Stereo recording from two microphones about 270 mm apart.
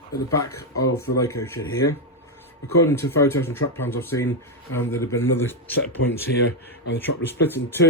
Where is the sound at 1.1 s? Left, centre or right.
Left.